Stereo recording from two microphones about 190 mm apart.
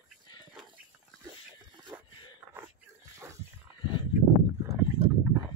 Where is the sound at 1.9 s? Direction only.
10° right (ahead or behind).